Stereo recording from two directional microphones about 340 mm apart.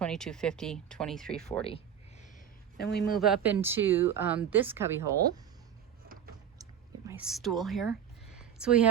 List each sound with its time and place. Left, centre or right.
0.0 s speech: centre
1.6 s a sound: centre
2.7 s speech: left
3.2 s speech: centre
6.6 s whispering: centre
8.4 s a sound: centre